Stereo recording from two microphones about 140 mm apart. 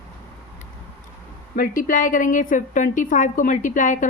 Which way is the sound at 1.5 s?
85° left.